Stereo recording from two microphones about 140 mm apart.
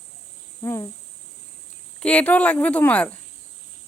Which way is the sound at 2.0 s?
10° left (ahead or behind).